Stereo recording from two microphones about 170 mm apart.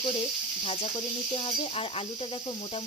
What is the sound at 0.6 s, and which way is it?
Speech, 35° left (ahead or behind).